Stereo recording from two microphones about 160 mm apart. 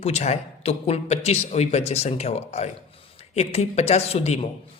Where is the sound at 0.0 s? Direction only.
40° left (ahead or behind).